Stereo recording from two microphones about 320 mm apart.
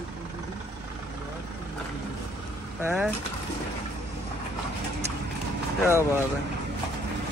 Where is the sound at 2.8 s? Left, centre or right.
Centre.